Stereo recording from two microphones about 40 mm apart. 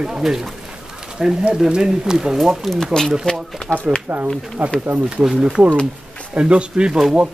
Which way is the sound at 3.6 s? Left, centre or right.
Left.